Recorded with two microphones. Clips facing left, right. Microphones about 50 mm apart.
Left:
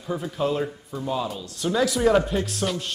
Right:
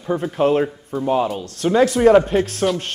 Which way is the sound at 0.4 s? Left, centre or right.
Right.